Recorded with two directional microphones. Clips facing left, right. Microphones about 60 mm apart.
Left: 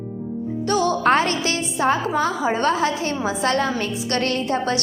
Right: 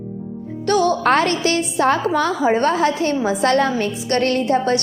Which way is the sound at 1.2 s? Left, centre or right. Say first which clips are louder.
Right 4 dB; right.